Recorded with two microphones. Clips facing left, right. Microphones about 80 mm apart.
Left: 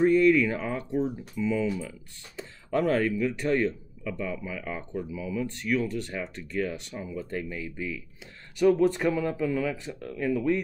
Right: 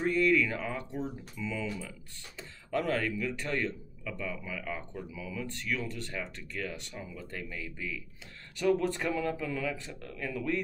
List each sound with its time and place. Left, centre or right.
0.0 s speech: left